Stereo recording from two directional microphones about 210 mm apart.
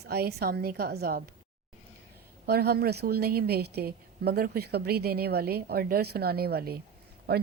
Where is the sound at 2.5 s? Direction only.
45° right (ahead or behind).